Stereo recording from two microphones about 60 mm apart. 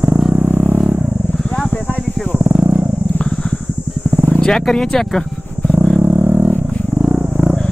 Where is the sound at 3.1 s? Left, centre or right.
Centre.